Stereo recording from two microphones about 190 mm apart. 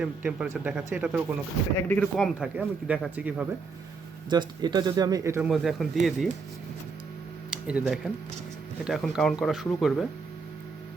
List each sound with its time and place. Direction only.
0.0 s speech: 5° right (ahead or behind)
1.9 s speech: 5° left (ahead or behind)
4.3 s speech: 20° right (ahead or behind)
5.5 s speech: centre (ahead or behind)
7.5 s speech: centre (ahead or behind)